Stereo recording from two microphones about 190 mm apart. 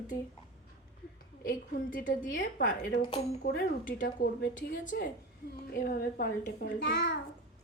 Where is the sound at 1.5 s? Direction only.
50° left (ahead or behind).